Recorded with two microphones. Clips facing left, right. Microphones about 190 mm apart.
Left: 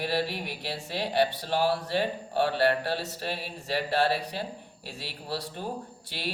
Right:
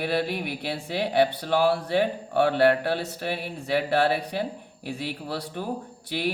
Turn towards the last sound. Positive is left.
turn(degrees=-60)  # may be behind; listen again after turning